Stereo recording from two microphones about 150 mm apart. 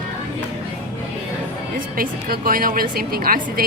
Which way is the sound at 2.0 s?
75° right (ahead or behind).